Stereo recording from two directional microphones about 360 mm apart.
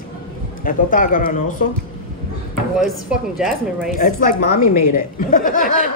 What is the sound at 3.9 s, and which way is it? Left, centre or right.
A woman's voice, left.